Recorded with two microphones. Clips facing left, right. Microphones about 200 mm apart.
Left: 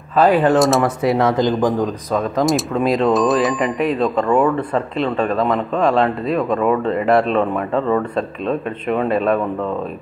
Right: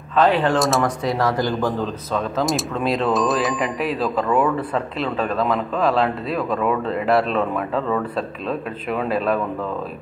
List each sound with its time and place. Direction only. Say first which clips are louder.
0.1 s speech: left 4 dB; 10° left (ahead or behind)
1.1 s speech: left 5 dB; 20° left (ahead or behind)
2.1 s speech: left 4 dB; centre (ahead or behind)